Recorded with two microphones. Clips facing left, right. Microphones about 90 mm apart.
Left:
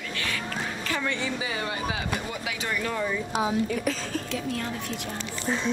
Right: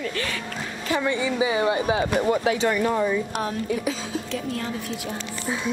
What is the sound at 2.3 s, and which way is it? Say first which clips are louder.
Speech: right 11 dB; 35° right (ahead or behind).